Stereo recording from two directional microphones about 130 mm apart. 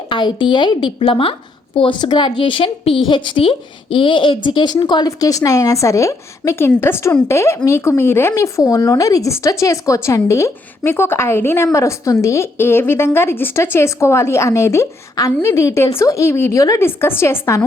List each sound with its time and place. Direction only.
0.1 s a woman's voice: 40° left (ahead or behind); by 17.6 s 20° left (ahead or behind)